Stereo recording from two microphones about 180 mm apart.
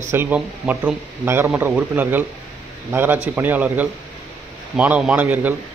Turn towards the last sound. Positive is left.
turn(degrees=-10)  # may be behind; listen again after turning